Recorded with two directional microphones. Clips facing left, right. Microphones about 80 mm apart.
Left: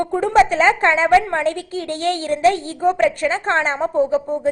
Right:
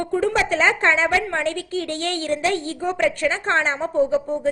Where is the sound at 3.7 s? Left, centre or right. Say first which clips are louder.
Left 2 dB; left.